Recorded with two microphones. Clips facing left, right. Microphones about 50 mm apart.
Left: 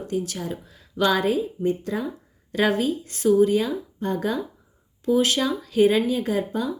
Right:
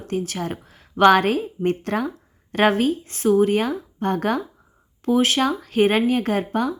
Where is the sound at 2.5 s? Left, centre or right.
Right.